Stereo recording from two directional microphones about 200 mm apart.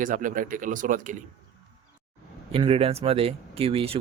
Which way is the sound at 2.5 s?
30° right (ahead or behind).